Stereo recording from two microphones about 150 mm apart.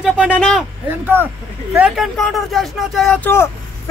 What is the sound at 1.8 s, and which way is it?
Speech, 5° right (ahead or behind).